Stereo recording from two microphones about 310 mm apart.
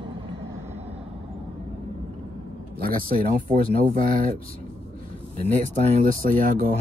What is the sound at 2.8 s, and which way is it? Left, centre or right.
Speech, right.